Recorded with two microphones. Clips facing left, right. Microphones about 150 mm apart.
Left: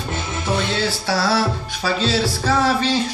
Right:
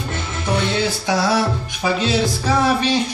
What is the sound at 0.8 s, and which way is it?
Music, 15° right (ahead or behind).